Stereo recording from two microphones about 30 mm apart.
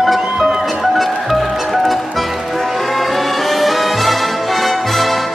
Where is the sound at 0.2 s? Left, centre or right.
Centre.